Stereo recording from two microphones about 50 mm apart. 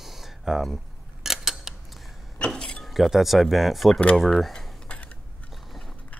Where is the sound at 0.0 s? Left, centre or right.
Centre.